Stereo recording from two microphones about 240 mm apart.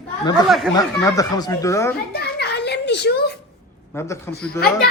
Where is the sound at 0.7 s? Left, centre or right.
Centre.